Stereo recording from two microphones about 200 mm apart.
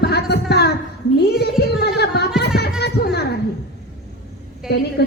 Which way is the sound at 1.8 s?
55° left (ahead or behind).